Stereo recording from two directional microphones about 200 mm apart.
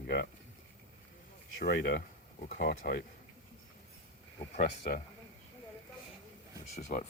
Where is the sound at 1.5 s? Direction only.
55° left (ahead or behind).